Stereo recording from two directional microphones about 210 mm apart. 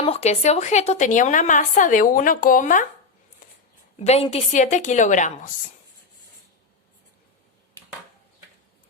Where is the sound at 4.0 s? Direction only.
30° left (ahead or behind).